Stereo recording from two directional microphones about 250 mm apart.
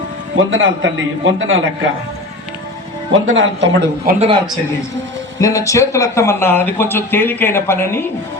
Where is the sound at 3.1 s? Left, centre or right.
Right.